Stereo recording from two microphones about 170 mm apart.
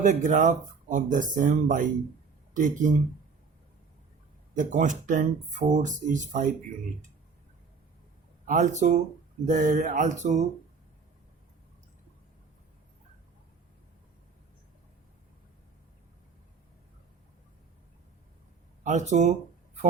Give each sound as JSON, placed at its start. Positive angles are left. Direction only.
{"t": 0.0, "sound": "speech", "side_deg": -45}
{"t": 4.5, "sound": "speech", "side_deg": -45}
{"t": 8.4, "sound": "speech", "side_deg": -45}
{"t": 18.8, "sound": "speech", "side_deg": -45}